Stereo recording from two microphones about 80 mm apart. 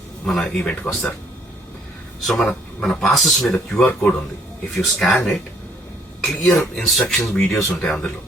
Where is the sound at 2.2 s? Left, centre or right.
Centre.